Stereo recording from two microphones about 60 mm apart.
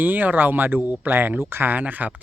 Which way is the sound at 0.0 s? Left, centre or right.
Right.